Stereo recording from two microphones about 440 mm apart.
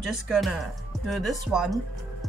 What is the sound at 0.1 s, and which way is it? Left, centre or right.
Speech, centre.